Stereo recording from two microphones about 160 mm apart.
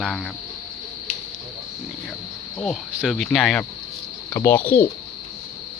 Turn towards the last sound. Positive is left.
turn(degrees=10)  # may be behind; listen again after turning